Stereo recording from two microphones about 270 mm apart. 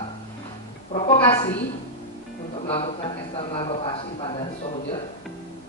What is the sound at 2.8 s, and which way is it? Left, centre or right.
A man's voice, left.